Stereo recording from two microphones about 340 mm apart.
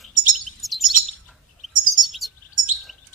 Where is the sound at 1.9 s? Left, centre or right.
Centre.